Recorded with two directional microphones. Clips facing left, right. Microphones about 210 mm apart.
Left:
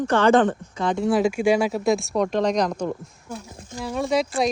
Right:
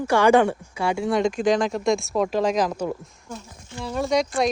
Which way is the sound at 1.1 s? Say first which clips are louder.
Left 2 dB; 5° left (ahead or behind).